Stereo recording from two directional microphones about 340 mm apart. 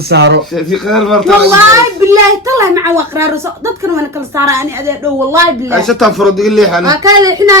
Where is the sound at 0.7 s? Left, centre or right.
Centre.